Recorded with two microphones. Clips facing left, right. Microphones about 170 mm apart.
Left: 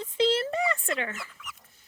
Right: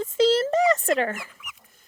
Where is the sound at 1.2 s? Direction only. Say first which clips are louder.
Even; 15° right (ahead or behind).